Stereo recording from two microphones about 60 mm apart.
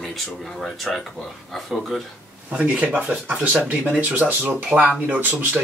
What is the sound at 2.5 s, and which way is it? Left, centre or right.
Speech, right.